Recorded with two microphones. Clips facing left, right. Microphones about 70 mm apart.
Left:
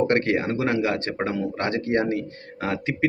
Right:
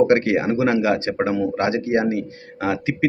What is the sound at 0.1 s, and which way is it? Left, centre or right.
Speech, centre.